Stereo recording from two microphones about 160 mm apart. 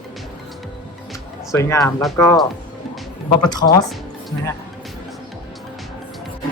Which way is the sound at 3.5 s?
25° left (ahead or behind).